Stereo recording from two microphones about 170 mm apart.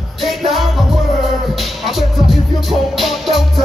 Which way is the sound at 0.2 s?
Centre (ahead or behind).